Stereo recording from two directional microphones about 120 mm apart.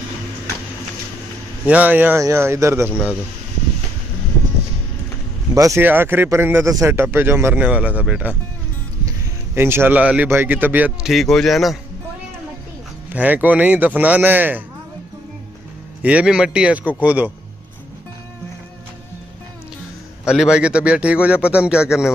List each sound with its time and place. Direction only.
1.7 s a man's voice: 15° right (ahead or behind)
5.5 s speech: 25° right (ahead or behind)
5.8 s a man's voice: 15° right (ahead or behind)
9.6 s a man's voice: 20° right (ahead or behind)
11.1 s speech: centre (ahead or behind)
13.1 s a man's voice: 15° right (ahead or behind)
16.0 s a man's voice: 10° right (ahead or behind)
20.2 s a man's voice: 5° right (ahead or behind)